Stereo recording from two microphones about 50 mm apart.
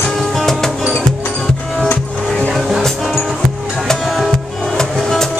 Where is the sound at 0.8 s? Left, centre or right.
Centre.